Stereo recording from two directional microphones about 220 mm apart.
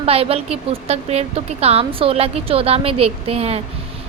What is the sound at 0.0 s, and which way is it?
A woman's voice, 25° right (ahead or behind).